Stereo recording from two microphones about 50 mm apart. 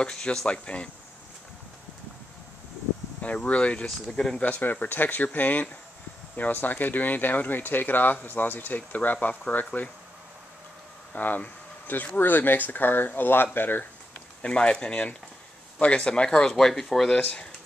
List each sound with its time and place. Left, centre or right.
0.0 s speech: centre
3.2 s speech: left
11.1 s speech: left
14.4 s speech: centre